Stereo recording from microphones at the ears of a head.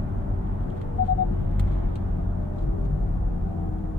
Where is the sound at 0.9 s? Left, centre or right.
Left.